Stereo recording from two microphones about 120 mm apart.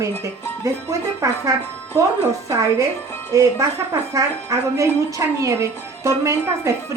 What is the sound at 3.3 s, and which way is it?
Speech, 25° right (ahead or behind).